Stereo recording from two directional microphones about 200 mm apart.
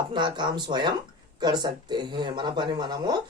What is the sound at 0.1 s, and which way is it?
Speech, 25° right (ahead or behind).